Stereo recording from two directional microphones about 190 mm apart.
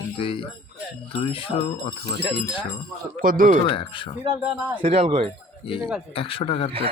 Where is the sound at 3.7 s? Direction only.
25° left (ahead or behind).